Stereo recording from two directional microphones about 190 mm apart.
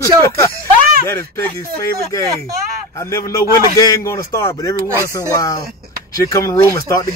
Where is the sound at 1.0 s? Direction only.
15° left (ahead or behind).